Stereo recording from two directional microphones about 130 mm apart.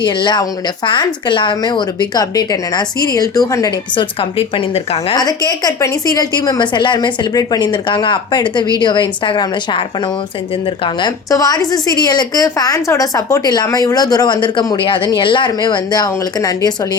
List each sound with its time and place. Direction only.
0.0 s a woman's voice: 35° left (ahead or behind)
3.9 s a woman's voice: 45° left (ahead or behind)
5.1 s a woman's voice: 30° left (ahead or behind)
10.8 s a woman's voice: 30° left (ahead or behind)